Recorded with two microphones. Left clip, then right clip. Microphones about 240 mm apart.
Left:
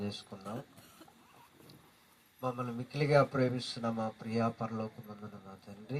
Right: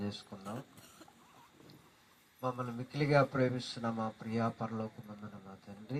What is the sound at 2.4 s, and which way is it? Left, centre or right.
Speech, left.